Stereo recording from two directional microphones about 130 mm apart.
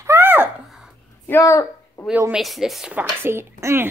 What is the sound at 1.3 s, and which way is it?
Speech, 25° left (ahead or behind).